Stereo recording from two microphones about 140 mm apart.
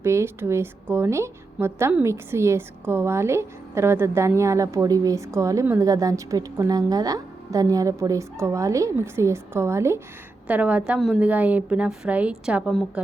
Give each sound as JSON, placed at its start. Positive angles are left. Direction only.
{"t": 0.0, "sound": "a woman's voice", "side_deg": -20}